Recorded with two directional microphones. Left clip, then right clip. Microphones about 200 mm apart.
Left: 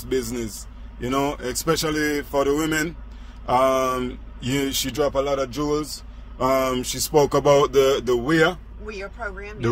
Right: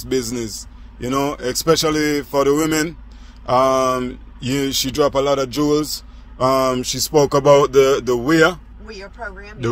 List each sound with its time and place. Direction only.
0.0 s speech: 30° right (ahead or behind)
8.8 s speech: 5° right (ahead or behind)